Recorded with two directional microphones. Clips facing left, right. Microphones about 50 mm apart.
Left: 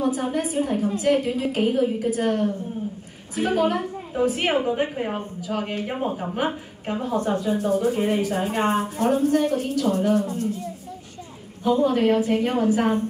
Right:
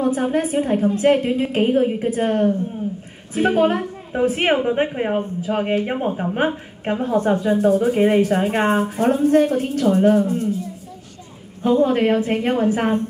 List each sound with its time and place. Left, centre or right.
0.0 s a woman's voice: right
11.6 s a woman's voice: right